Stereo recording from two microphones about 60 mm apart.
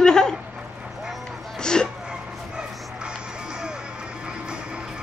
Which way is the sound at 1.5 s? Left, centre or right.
Centre.